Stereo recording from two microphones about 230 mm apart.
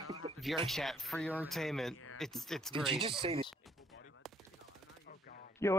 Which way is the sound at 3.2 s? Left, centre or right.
Right.